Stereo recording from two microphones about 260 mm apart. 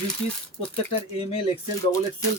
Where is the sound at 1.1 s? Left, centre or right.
Left.